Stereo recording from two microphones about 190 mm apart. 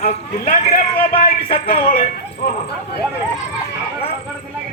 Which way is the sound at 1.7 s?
50° left (ahead or behind).